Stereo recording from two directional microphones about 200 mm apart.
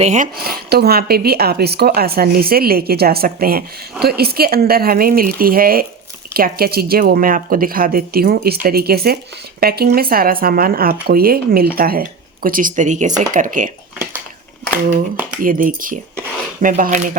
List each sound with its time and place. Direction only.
0.0 s speech: 35° right (ahead or behind)
0.3 s speech: 50° right (ahead or behind)
15.4 s speech: 45° right (ahead or behind)